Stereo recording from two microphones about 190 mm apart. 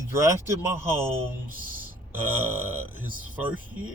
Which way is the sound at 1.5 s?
45° right (ahead or behind).